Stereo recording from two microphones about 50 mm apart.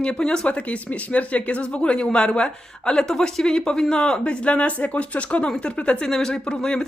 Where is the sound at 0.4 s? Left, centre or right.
Left.